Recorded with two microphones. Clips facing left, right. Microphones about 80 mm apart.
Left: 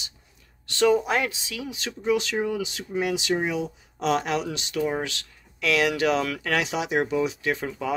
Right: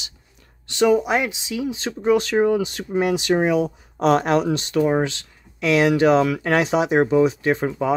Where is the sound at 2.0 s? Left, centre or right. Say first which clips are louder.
Right 7 dB; right.